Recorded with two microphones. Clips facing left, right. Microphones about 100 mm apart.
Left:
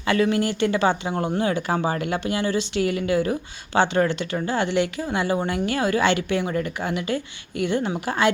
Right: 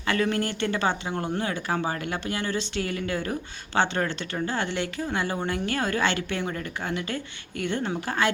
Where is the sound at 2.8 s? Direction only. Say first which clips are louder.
Left 6 dB; 35° right (ahead or behind).